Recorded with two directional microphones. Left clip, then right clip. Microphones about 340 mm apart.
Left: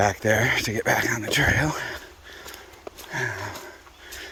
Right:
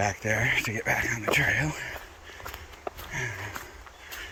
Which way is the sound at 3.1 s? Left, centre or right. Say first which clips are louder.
Left 7 dB; centre.